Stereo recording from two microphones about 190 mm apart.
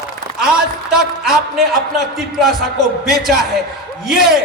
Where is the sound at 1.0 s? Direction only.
Centre (ahead or behind).